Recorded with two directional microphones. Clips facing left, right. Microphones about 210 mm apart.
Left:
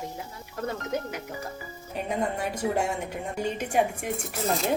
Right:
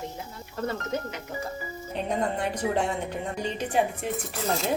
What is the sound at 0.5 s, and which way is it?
Speech, 10° left (ahead or behind).